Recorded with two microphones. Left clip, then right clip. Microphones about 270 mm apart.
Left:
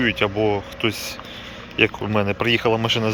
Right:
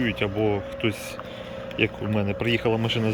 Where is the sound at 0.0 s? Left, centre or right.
Centre.